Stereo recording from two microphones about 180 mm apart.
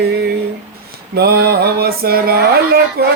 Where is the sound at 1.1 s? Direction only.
60° right (ahead or behind).